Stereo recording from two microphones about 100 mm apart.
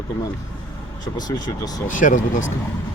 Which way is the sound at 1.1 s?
40° left (ahead or behind).